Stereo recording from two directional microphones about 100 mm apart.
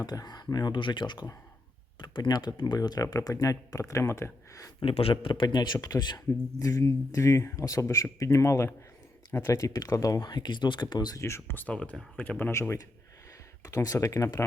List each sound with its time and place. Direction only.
0.0 s speech: 40° left (ahead or behind)
4.8 s speech: 65° left (ahead or behind); by 11.2 s 45° left (ahead or behind)
11.2 s speech: 25° left (ahead or behind)